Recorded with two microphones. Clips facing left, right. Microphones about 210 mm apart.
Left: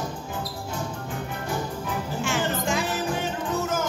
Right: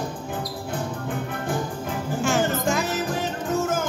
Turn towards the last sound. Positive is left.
turn(degrees=-50)  # may be behind; listen again after turning